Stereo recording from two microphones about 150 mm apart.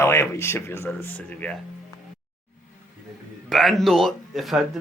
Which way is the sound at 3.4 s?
Centre (ahead or behind).